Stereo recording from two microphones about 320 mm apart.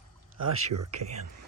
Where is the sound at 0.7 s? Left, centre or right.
Right.